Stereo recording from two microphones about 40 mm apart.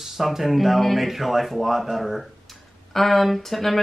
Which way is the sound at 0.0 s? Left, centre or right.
Centre.